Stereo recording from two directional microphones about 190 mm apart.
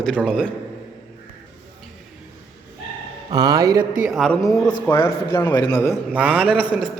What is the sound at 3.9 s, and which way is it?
Speech, 5° right (ahead or behind).